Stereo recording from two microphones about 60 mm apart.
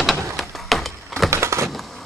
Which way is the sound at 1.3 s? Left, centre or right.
Right.